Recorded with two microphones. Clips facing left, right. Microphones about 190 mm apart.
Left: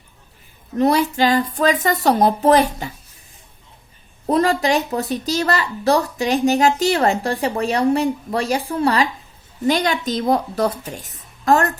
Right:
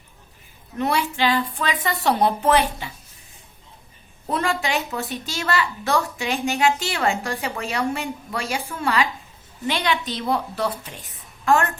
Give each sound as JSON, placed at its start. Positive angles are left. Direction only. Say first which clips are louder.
{"t": 0.8, "sound": "a woman's voice", "louder": "left 6 dB", "side_deg": 40}
{"t": 4.3, "sound": "a woman's voice", "louder": "left 7 dB", "side_deg": 40}